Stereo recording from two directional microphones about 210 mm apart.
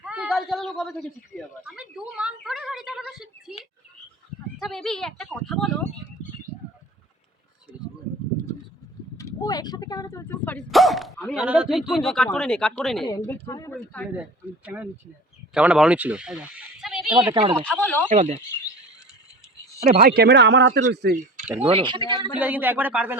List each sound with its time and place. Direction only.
0.0 s a woman's voice: 5° right (ahead or behind)
4.6 s speech: centre (ahead or behind)
9.1 s speech: 15° left (ahead or behind); by 13.1 s centre (ahead or behind)
13.1 s speech: 15° left (ahead or behind)
14.6 s speech: 5° right (ahead or behind)
17.3 s speech: 25° right (ahead or behind)
17.6 s speech: 5° left (ahead or behind)
18.1 s speech: 35° right (ahead or behind)
20.0 s a man's voice: 45° right (ahead or behind)
21.6 s speech: 25° right (ahead or behind)
22.4 s speech: 10° right (ahead or behind)